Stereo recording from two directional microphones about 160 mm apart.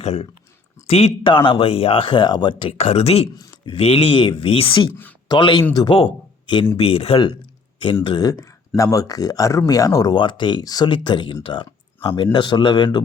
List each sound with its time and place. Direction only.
0.0 s speech: 45° left (ahead or behind)
8.0 s speech: 25° left (ahead or behind)